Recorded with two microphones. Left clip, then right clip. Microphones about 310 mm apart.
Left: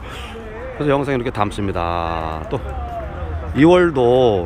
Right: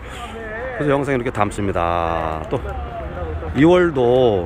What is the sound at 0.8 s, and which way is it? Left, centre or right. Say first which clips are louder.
Speech: left 1 dB; centre.